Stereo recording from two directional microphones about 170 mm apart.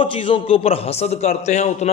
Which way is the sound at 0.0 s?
30° left (ahead or behind).